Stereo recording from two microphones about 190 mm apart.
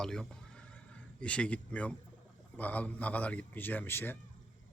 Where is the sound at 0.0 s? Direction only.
5° left (ahead or behind).